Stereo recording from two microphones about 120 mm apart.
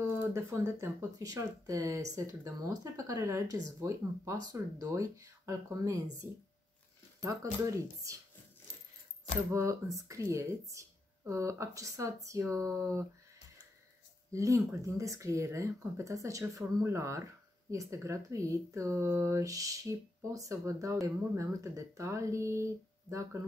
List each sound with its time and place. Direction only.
0.0 s speech: 20° right (ahead or behind)
7.7 s speech: 25° right (ahead or behind)
9.5 s speech: 25° right (ahead or behind)
14.3 s speech: 25° right (ahead or behind)